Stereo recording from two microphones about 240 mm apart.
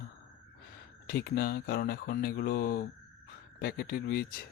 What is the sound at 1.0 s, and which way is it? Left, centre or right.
Speech, left.